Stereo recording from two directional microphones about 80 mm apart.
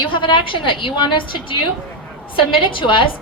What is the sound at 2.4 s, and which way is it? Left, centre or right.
Speech, left.